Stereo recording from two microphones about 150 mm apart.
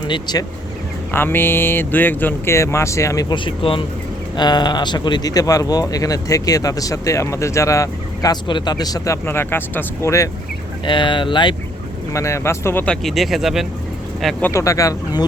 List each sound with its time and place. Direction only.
0.1 s speech: 30° left (ahead or behind)
1.1 s speech: 15° left (ahead or behind)
10.8 s speech: 35° left (ahead or behind)
12.1 s speech: 20° left (ahead or behind); by 13.7 s centre (ahead or behind)
14.4 s speech: 20° left (ahead or behind)